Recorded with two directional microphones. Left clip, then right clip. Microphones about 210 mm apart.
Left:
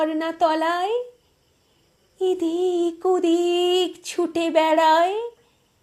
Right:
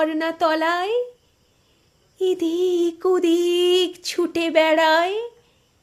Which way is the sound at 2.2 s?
15° right (ahead or behind).